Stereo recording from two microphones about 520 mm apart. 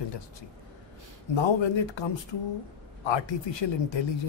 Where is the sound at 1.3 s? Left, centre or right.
Left.